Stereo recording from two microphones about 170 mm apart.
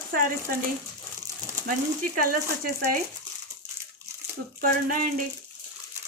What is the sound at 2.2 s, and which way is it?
Speech, 55° right (ahead or behind).